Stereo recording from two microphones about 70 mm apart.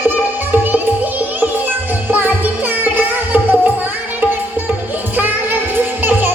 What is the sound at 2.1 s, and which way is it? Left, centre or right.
Music, right.